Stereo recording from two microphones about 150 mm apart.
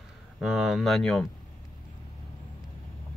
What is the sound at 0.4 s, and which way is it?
Speech, 5° right (ahead or behind).